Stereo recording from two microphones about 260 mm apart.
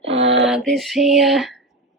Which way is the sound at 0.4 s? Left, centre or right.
Centre.